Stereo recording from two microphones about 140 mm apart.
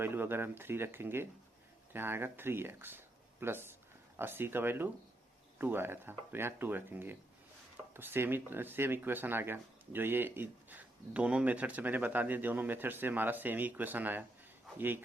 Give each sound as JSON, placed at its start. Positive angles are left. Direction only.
{"t": 0.0, "sound": "speech", "side_deg": -15}